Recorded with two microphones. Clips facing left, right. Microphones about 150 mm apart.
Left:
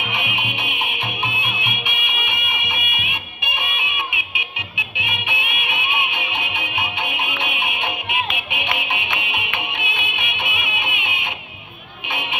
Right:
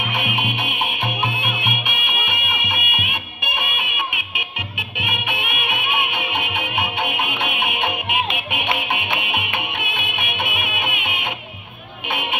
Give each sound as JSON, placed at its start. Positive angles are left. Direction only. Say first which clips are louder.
{"t": 0.1, "sound": "music", "louder": "right 3 dB", "side_deg": -50}